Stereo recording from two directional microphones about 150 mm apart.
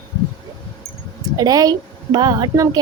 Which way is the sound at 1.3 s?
25° right (ahead or behind).